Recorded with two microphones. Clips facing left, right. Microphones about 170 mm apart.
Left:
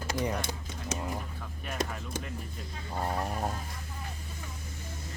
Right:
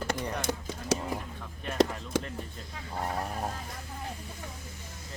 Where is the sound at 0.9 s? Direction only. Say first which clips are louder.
Right 7 dB; 90° right.